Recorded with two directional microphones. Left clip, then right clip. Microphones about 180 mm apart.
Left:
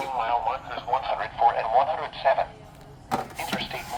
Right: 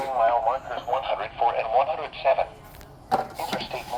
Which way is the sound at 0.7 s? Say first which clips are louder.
Even; 10° left (ahead or behind).